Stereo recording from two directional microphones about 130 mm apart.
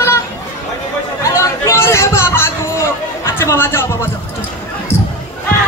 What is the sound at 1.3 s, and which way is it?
Chatter, 20° left (ahead or behind).